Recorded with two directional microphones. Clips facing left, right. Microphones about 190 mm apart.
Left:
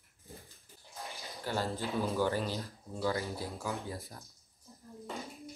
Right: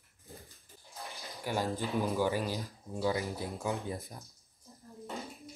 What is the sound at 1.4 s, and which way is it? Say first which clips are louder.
Speech: right 1 dB; 15° right (ahead or behind).